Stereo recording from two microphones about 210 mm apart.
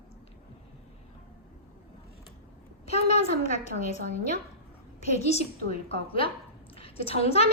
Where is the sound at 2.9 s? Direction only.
30° left (ahead or behind).